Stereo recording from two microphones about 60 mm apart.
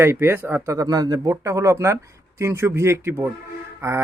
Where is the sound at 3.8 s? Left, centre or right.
Right.